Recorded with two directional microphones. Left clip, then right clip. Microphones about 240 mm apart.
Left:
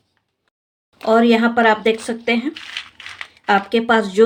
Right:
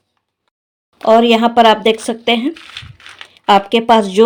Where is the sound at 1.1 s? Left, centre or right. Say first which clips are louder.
Right 5 dB; right.